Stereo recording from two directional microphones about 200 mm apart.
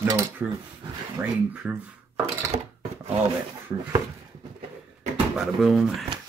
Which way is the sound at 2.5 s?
30° right (ahead or behind).